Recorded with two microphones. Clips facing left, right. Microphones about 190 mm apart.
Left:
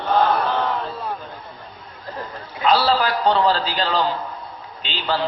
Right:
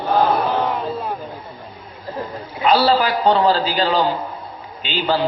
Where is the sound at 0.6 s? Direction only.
15° right (ahead or behind).